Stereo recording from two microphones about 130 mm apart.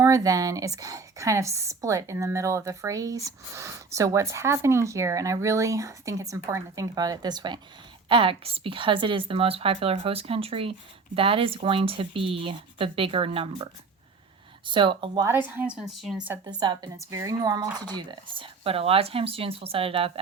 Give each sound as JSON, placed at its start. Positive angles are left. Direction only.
{"t": 0.0, "sound": "a woman's voice", "side_deg": -25}
{"t": 8.1, "sound": "speech", "side_deg": -45}
{"t": 14.7, "sound": "a woman's voice", "side_deg": -40}
{"t": 15.2, "sound": "speech", "side_deg": -15}
{"t": 16.4, "sound": "a woman's voice", "side_deg": -35}